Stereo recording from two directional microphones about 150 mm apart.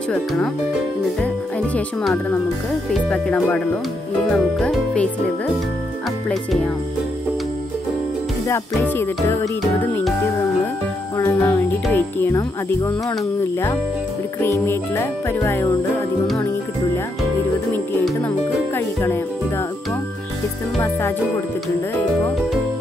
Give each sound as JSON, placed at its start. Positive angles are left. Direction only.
{"t": 0.1, "sound": "speech", "side_deg": 5}
{"t": 2.9, "sound": "music", "side_deg": 5}
{"t": 6.2, "sound": "music", "side_deg": 5}
{"t": 8.5, "sound": "speech", "side_deg": 15}
{"t": 11.1, "sound": "speech", "side_deg": 20}
{"t": 18.8, "sound": "music", "side_deg": 15}